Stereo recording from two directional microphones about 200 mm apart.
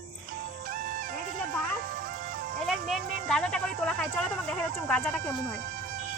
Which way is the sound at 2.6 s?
Centre (ahead or behind).